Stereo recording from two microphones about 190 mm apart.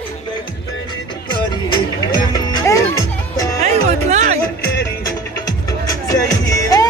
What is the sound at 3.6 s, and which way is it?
Music, 35° right (ahead or behind).